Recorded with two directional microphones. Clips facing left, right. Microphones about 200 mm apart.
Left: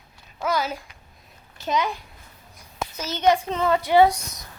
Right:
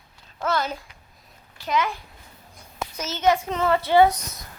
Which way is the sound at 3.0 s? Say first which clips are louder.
Left 1 dB; 15° left (ahead or behind).